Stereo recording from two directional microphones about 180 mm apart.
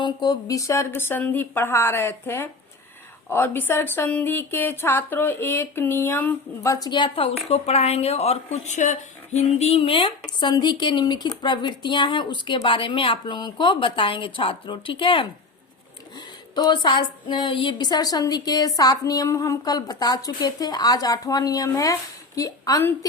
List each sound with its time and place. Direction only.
0.0 s speech: 25° left (ahead or behind)
16.6 s speech: 25° left (ahead or behind)